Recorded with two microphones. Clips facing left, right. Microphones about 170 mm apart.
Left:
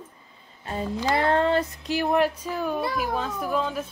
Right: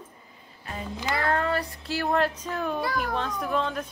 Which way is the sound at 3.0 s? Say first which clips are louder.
Left 1 dB; 5° left (ahead or behind).